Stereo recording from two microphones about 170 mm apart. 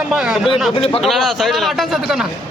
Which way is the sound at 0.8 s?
35° left (ahead or behind).